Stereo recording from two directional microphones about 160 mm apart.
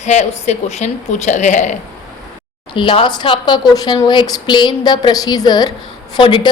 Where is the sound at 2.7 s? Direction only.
30° left (ahead or behind).